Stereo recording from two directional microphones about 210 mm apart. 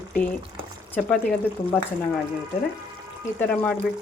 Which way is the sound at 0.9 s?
5° left (ahead or behind).